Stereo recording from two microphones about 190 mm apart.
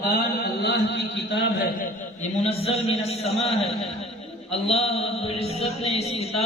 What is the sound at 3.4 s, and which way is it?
Speech, centre (ahead or behind).